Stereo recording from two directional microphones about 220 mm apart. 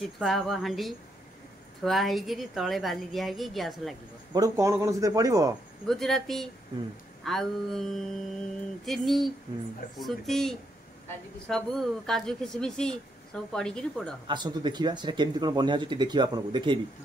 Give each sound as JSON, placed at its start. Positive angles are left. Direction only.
{"t": 0.0, "sound": "speech", "side_deg": 0}
{"t": 4.3, "sound": "speech", "side_deg": -15}
{"t": 5.9, "sound": "speech", "side_deg": 0}
{"t": 14.2, "sound": "speech", "side_deg": -20}